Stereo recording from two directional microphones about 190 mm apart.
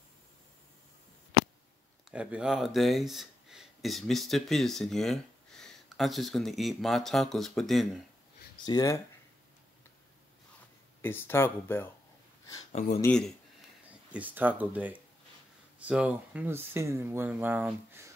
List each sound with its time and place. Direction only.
2.0 s speech: 5° right (ahead or behind)
8.6 s speech: 20° left (ahead or behind)
11.0 s speech: 10° left (ahead or behind)
13.0 s speech: 5° left (ahead or behind)
14.1 s speech: 10° right (ahead or behind)